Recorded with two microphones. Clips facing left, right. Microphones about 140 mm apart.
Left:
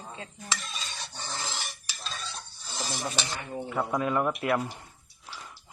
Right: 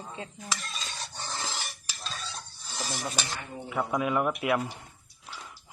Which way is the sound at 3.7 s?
5° right (ahead or behind).